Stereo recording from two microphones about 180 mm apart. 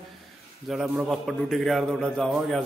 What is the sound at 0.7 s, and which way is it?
A man's voice, centre (ahead or behind).